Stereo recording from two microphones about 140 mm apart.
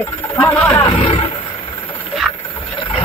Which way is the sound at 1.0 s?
50° left (ahead or behind).